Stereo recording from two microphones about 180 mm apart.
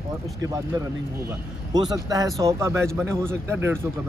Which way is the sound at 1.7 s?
20° right (ahead or behind).